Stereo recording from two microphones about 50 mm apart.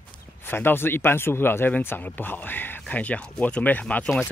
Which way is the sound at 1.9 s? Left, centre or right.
Left.